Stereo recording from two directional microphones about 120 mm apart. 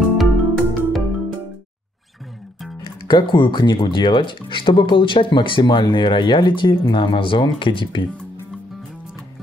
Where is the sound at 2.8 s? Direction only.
40° left (ahead or behind).